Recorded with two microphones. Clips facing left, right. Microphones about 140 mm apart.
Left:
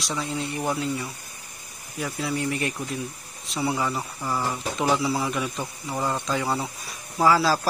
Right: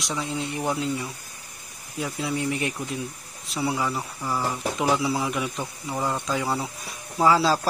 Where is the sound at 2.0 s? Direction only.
15° right (ahead or behind).